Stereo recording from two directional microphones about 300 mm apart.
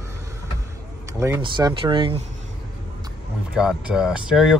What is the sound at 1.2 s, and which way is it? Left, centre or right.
Speech, centre.